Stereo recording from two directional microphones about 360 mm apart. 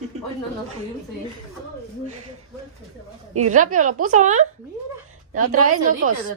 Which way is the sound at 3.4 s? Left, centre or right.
Right.